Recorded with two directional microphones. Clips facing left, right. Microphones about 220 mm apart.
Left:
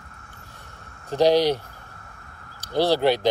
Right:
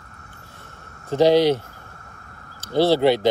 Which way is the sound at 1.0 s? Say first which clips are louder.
Right 3 dB; 15° left (ahead or behind).